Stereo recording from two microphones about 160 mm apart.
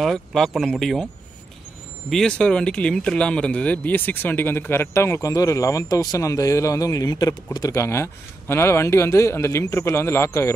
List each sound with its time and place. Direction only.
0.0 s speech: centre (ahead or behind)
2.0 s speech: 5° left (ahead or behind)